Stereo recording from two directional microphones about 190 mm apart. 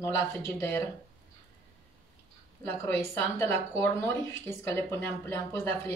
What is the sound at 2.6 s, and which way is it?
Speech, 10° left (ahead or behind).